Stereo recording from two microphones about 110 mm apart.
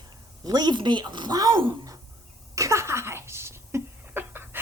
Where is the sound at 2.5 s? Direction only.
25° right (ahead or behind).